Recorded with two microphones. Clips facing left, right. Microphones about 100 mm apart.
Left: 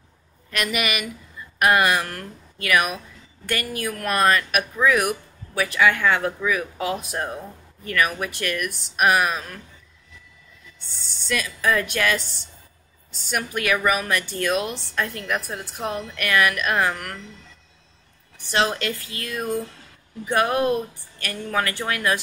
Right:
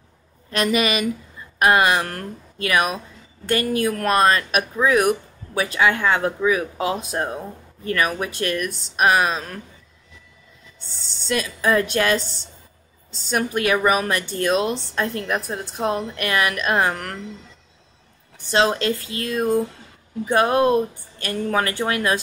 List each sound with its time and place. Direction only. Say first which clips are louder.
0.5 s speech: right 5 dB; 30° right (ahead or behind)
11.2 s speech: right 2 dB; 30° right (ahead or behind)
13.3 s speech: right 4 dB; 30° right (ahead or behind)
16.9 s speech: right 3 dB; 40° right (ahead or behind)
18.5 s speech: right 4 dB; 25° right (ahead or behind)